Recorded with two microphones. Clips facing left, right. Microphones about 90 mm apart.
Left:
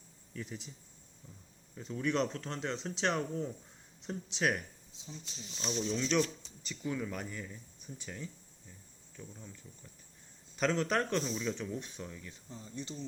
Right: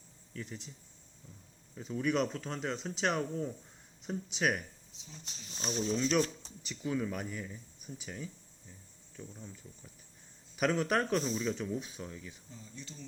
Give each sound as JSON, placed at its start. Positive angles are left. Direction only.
{"t": 0.3, "sound": "speech", "side_deg": 0}
{"t": 1.7, "sound": "speech", "side_deg": -5}
{"t": 5.2, "sound": "speech", "side_deg": -40}
{"t": 6.0, "sound": "speech", "side_deg": -5}